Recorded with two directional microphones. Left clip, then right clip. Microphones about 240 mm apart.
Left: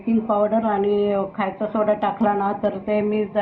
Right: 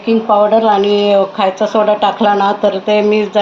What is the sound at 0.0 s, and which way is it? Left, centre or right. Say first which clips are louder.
Speech: right 10 dB; right.